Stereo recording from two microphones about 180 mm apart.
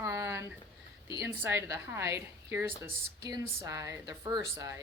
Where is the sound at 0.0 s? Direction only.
15° right (ahead or behind).